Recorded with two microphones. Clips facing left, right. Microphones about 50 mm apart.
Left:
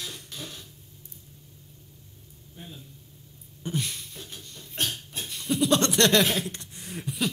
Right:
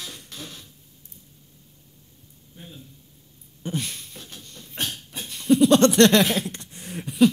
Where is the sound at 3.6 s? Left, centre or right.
Right.